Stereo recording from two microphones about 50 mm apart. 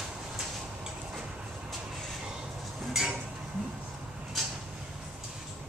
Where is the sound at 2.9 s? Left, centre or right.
Centre.